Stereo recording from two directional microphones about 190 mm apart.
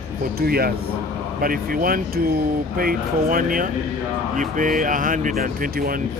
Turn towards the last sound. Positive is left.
turn(degrees=-50)  # may be behind; listen again after turning